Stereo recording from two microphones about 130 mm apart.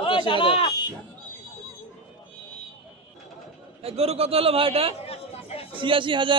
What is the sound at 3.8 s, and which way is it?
A man's voice, 50° right (ahead or behind).